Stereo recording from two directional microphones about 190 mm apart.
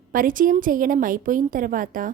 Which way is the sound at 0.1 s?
45° right (ahead or behind).